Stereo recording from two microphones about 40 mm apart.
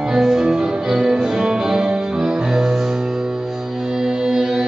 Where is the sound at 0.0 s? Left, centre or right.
Centre.